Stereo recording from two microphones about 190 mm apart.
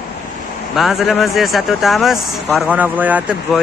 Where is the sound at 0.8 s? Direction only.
Centre (ahead or behind).